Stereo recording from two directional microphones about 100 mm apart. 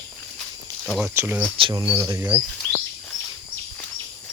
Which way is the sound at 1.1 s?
25° right (ahead or behind).